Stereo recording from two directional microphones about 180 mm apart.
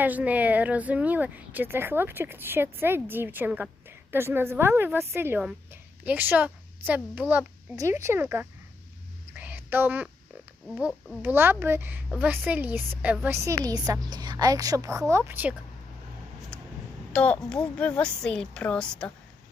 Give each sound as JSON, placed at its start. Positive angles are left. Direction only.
{"t": 0.0, "sound": "speech", "side_deg": -10}
{"t": 9.3, "sound": "a sound", "side_deg": -10}
{"t": 10.8, "sound": "a woman's voice", "side_deg": -5}
{"t": 17.1, "sound": "a woman's voice", "side_deg": 5}